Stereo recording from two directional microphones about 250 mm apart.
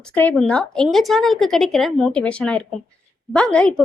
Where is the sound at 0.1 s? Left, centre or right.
Centre.